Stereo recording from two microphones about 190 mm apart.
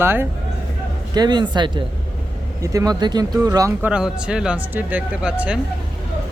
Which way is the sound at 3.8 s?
5° right (ahead or behind).